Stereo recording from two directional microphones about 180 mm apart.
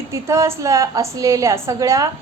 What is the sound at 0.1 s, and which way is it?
A woman's voice, 15° right (ahead or behind).